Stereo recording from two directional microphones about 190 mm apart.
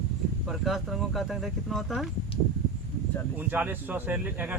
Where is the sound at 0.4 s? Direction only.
Centre (ahead or behind).